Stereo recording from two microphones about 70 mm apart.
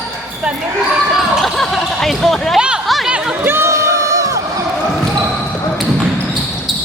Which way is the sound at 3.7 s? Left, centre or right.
Right.